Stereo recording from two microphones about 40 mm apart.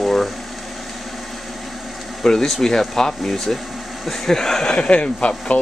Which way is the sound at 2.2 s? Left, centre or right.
Centre.